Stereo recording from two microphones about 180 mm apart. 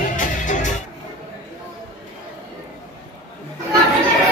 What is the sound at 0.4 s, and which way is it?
Music, 45° left (ahead or behind).